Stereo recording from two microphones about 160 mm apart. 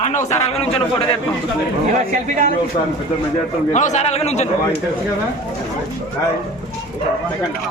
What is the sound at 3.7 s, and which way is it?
Speech, 50° left (ahead or behind).